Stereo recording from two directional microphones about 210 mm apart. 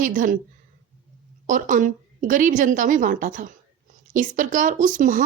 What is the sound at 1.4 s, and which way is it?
Speech, 40° right (ahead or behind).